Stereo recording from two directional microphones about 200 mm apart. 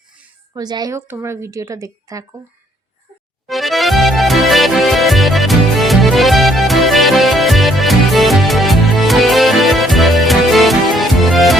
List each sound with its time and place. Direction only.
0.5 s a woman's voice: 20° right (ahead or behind)
3.4 s music: centre (ahead or behind)